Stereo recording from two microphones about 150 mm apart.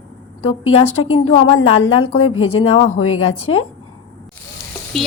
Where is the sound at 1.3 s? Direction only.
40° left (ahead or behind).